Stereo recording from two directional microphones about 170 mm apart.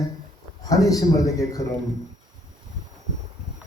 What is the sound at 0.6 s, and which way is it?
A man's voice, 20° left (ahead or behind).